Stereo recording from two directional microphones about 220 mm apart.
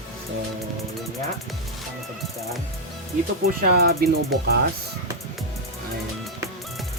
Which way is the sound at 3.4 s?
45° right (ahead or behind).